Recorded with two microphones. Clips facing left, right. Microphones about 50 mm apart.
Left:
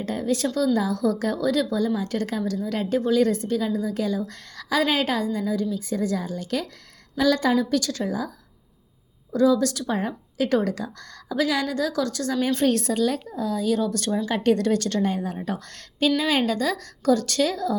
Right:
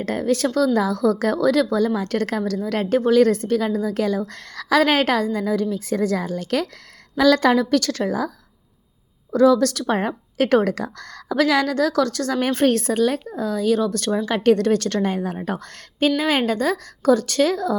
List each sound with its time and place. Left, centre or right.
0.0 s speech: right
3.8 s a woman's voice: right
7.6 s speech: right
9.3 s a woman's voice: right